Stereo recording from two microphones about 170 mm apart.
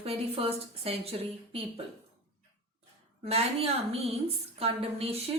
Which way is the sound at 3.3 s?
35° right (ahead or behind).